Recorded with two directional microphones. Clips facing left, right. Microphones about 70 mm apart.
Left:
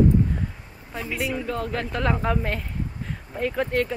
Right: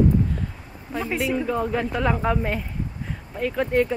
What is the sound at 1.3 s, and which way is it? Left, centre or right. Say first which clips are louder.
Speech: right 4 dB; centre.